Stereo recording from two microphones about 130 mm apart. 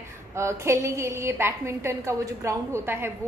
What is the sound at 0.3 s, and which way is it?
A woman's voice, 20° right (ahead or behind).